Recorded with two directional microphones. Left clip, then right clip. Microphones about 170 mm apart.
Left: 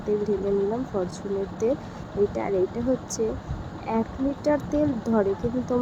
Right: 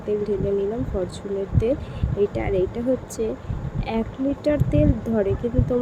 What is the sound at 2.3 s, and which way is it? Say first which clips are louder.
Speech: right 2 dB; 25° right (ahead or behind).